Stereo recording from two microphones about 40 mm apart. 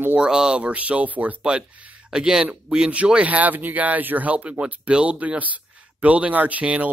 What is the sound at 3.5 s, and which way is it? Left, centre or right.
Speech, right.